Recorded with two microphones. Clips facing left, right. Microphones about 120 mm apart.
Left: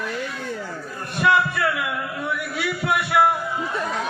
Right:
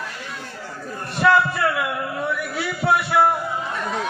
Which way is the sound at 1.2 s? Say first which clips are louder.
Right 2 dB; 30° right (ahead or behind).